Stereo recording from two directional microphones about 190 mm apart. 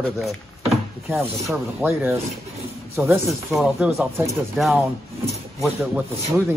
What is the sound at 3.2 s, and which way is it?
Speech, centre (ahead or behind).